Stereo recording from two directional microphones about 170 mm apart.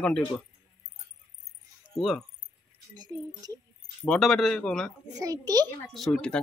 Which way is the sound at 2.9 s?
25° right (ahead or behind).